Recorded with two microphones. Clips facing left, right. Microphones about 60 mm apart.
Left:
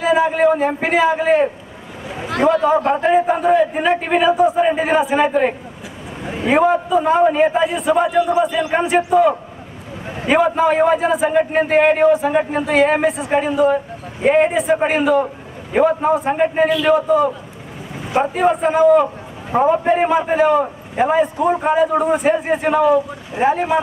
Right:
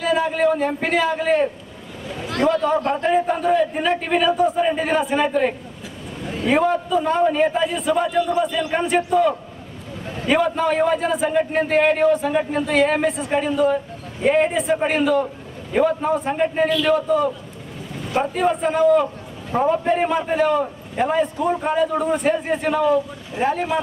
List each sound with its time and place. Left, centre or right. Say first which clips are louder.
0.0 s a man's voice: left 4 dB; centre
6.2 s a sound: left 2 dB; left
6.5 s a man's voice: left 4 dB; centre
14.5 s a man's voice: left 4 dB; centre
19.5 s a man's voice: left 4 dB; left